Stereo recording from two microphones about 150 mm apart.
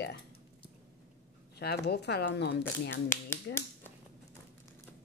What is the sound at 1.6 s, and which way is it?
A woman's voice, 90° left.